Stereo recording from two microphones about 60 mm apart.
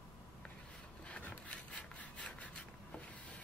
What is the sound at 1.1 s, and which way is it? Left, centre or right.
Wood, left.